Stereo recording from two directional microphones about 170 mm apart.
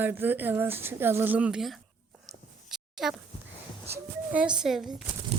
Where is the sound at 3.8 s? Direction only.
10° right (ahead or behind).